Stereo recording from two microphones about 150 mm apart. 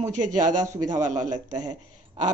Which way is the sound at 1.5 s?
25° right (ahead or behind).